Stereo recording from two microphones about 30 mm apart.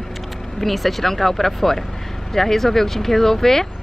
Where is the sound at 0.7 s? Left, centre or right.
Centre.